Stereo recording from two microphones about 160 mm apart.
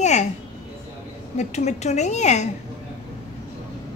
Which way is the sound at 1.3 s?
45° left (ahead or behind).